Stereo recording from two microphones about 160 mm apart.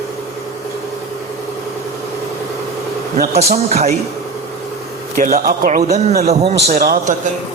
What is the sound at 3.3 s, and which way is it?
Speech, 45° right (ahead or behind).